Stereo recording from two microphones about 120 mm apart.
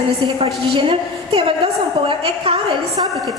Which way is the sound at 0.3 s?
50° right (ahead or behind).